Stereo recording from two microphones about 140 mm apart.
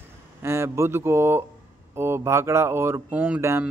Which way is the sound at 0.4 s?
20° right (ahead or behind).